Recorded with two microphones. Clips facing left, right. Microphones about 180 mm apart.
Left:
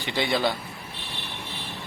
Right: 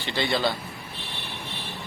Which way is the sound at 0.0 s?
15° left (ahead or behind).